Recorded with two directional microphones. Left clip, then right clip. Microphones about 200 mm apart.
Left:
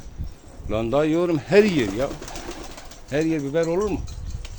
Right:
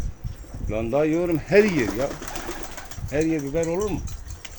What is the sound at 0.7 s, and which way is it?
Speech, 25° left (ahead or behind).